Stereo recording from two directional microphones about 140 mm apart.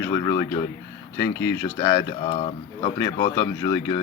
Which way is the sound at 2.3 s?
45° left (ahead or behind).